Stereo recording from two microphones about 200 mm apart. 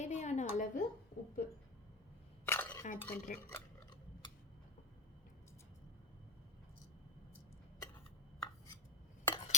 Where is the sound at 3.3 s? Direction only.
45° left (ahead or behind).